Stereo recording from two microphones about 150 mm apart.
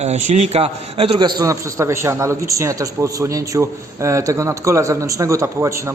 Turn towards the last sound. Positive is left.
turn(degrees=-20)  # may be behind; listen again after turning